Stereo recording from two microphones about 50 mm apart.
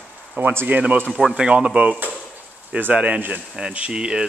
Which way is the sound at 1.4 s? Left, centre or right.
Centre.